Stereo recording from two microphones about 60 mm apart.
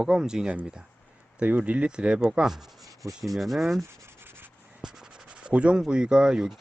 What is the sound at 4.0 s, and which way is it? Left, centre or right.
Rub, right.